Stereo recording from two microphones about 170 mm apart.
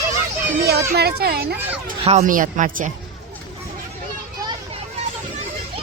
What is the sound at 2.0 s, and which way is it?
Speech, 40° right (ahead or behind).